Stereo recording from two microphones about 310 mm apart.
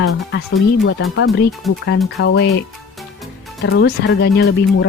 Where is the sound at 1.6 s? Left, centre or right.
Centre.